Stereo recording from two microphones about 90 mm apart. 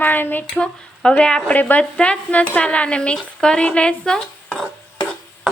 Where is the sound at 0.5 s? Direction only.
10° left (ahead or behind).